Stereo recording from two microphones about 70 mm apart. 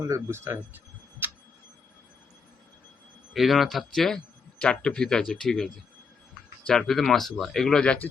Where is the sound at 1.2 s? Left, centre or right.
Right.